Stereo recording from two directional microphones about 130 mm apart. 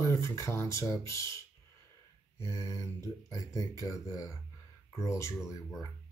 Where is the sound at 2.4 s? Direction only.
20° left (ahead or behind).